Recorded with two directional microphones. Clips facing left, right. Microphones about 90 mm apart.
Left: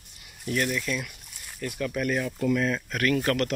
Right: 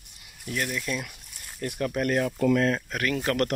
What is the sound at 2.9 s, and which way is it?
Speech, 15° right (ahead or behind).